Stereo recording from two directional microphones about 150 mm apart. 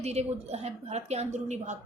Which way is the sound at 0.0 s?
45° right (ahead or behind).